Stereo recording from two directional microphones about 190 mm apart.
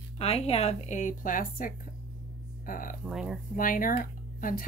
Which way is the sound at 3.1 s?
Centre (ahead or behind).